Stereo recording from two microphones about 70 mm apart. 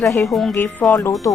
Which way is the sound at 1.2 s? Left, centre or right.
Left.